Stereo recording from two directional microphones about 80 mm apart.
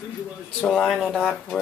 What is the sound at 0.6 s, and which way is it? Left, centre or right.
Speech, centre.